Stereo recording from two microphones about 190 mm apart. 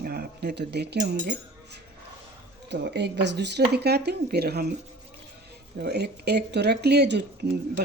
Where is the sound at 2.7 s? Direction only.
65° right (ahead or behind).